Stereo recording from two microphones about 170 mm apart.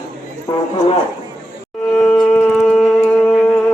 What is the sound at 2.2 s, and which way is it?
Shofar, 5° left (ahead or behind).